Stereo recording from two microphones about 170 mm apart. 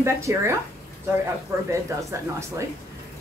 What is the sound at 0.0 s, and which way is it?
Speech, 15° right (ahead or behind).